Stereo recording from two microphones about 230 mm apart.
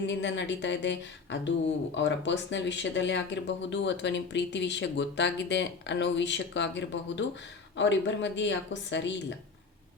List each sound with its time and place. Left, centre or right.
0.1 s speech: left